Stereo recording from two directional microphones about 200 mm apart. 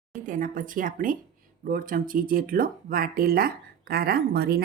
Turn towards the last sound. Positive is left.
turn(degrees=-50)  # may be behind; listen again after turning